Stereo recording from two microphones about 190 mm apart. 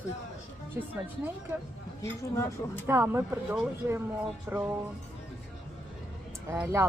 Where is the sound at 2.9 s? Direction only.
10° right (ahead or behind).